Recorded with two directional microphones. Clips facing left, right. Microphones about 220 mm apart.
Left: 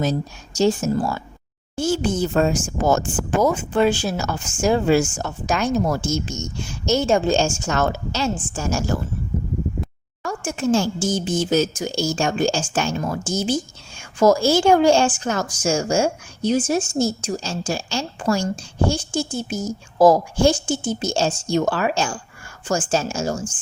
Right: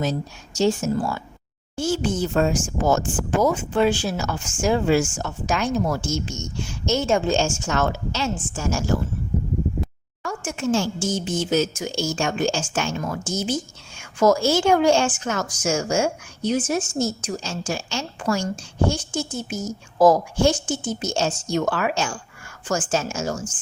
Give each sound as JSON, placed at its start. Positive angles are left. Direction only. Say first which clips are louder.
{"t": 0.0, "sound": "a woman's voice", "louder": "left 3 dB", "side_deg": 40}
{"t": 10.2, "sound": "a woman's voice", "louder": "left 3 dB", "side_deg": 35}